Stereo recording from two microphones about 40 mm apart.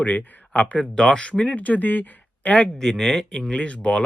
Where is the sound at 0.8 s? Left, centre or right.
Left.